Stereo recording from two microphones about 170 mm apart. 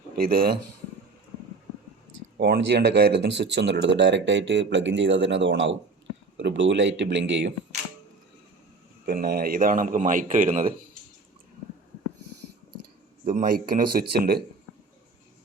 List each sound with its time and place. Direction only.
0.2 s speech: 60° right (ahead or behind)
2.4 s speech: 75° right (ahead or behind); by 7.5 s 90° right
9.0 s speech: 65° right (ahead or behind)
13.2 s speech: 55° right (ahead or behind)